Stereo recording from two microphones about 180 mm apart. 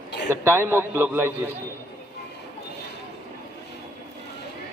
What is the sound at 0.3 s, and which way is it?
A man's voice, 15° right (ahead or behind).